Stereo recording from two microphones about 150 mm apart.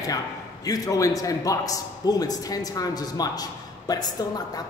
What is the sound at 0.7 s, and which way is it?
Speech, 20° left (ahead or behind).